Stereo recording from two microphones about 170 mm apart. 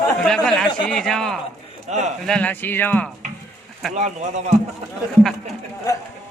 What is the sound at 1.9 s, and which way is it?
Speech, 45° right (ahead or behind).